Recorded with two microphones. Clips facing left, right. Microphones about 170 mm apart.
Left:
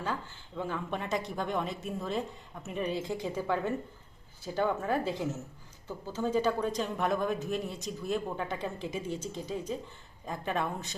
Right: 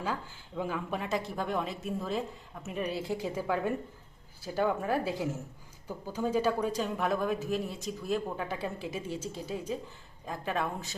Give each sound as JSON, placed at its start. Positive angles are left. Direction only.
{"t": 0.0, "sound": "a woman's voice", "side_deg": -10}